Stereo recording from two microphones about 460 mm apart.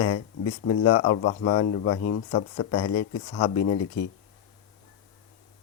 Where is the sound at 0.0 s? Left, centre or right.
Left.